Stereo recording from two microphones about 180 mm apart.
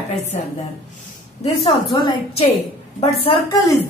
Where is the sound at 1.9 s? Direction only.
25° left (ahead or behind).